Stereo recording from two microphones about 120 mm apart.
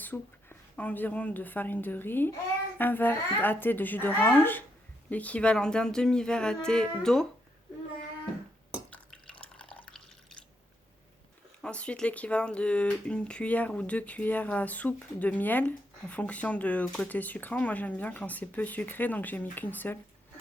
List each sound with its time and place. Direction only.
0.0 s a woman's voice: 15° left (ahead or behind)
8.9 s drip: 10° left (ahead or behind)
11.6 s speech: 10° left (ahead or behind)